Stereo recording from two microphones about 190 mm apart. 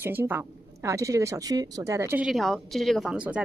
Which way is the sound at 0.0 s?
10° right (ahead or behind).